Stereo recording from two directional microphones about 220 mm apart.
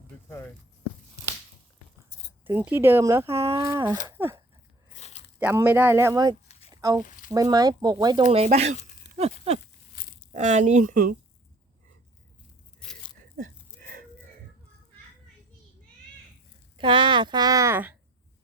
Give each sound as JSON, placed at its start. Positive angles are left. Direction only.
{"t": 2.4, "sound": "speech", "side_deg": -10}
{"t": 4.9, "sound": "biting", "side_deg": 30}
{"t": 5.4, "sound": "speech", "side_deg": -10}
{"t": 8.3, "sound": "speech", "side_deg": -30}
{"t": 16.7, "sound": "speech", "side_deg": -20}